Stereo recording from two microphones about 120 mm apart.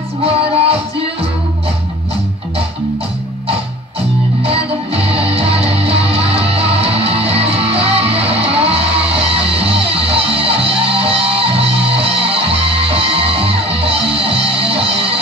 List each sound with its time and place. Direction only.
0.2 s music: 55° right (ahead or behind)
4.4 s music: 55° right (ahead or behind)